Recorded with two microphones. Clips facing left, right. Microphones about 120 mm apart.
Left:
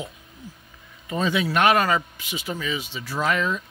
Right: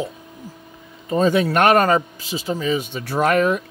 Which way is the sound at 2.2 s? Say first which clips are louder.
Right 6 dB; 30° right (ahead or behind).